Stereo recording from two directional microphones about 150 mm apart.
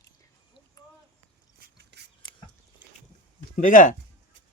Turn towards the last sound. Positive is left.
turn(degrees=60)  # may be behind; listen again after turning